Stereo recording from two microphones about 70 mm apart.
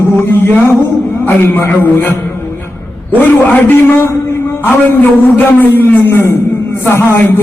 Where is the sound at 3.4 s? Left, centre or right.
Left.